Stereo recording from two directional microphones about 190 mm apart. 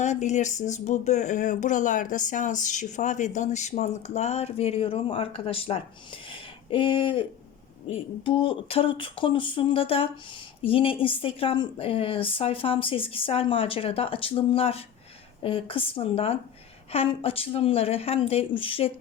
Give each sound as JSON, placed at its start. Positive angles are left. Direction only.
{"t": 0.0, "sound": "speech", "side_deg": 35}
{"t": 6.3, "sound": "a sound", "side_deg": 25}
{"t": 7.9, "sound": "a woman's voice", "side_deg": 30}